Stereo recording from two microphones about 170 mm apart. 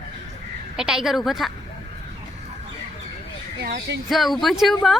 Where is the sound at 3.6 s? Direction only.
75° right (ahead or behind).